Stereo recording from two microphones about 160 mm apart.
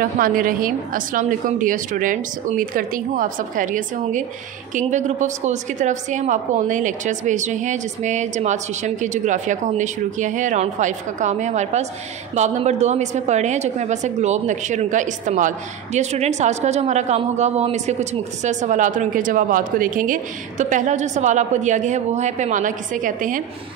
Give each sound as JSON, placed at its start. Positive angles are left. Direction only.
{"t": 0.0, "sound": "a woman's voice", "side_deg": -60}